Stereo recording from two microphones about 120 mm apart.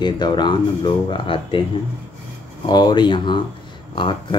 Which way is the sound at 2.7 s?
35° left (ahead or behind).